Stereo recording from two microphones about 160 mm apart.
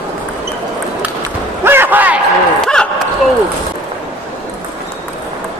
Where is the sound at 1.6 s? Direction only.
15° right (ahead or behind).